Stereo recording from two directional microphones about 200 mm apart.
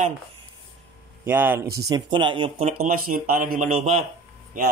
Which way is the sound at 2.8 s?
45° right (ahead or behind).